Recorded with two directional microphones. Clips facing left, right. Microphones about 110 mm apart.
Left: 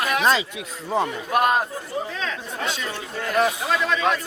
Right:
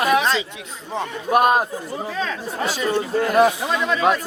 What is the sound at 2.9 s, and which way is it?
A man's voice, 40° right (ahead or behind).